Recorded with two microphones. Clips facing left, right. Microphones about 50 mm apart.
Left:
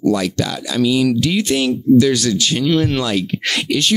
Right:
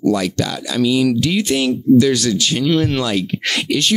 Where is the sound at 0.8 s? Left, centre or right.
Centre.